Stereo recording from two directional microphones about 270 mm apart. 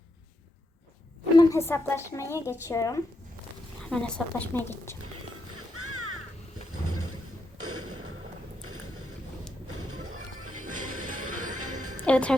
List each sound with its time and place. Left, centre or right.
1.4 s a woman's voice: centre
5.0 s music: right
6.7 s a sound: right
9.6 s music: right
12.0 s a woman's voice: centre